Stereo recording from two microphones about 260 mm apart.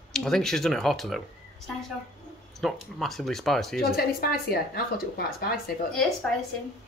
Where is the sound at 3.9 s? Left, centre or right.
Left.